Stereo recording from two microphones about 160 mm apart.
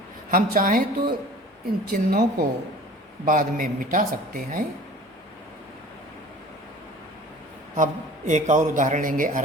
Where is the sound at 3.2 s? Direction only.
60° right (ahead or behind).